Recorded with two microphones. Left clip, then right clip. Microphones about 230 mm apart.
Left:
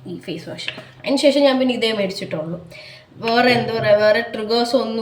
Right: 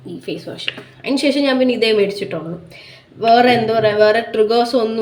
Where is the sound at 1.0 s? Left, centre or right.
Centre.